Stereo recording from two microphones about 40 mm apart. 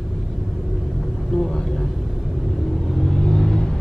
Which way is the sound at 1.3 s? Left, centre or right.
Centre.